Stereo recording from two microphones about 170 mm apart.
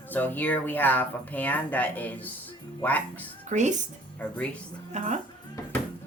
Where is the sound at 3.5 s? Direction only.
45° right (ahead or behind).